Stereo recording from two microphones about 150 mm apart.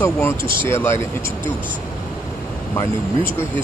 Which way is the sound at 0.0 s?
15° left (ahead or behind).